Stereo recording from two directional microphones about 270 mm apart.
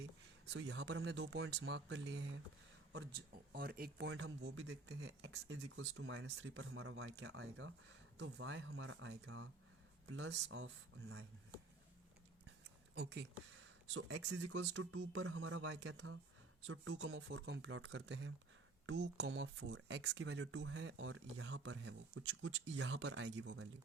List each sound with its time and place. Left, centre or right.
0.5 s speech: right
12.9 s speech: right